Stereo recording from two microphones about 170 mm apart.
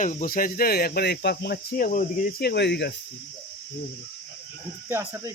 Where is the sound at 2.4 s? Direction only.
80° left.